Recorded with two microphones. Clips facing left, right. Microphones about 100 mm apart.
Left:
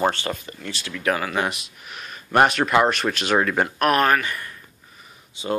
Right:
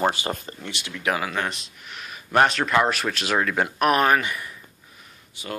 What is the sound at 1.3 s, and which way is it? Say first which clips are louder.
Speech: left 3 dB; 10° left (ahead or behind).